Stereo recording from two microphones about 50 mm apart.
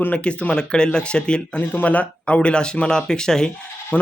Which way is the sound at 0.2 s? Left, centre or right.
Left.